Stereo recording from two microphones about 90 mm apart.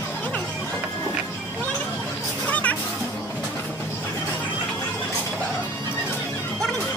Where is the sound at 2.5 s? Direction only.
15° left (ahead or behind).